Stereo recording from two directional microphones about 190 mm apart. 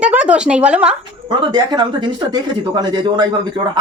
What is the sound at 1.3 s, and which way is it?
Speech, 25° right (ahead or behind).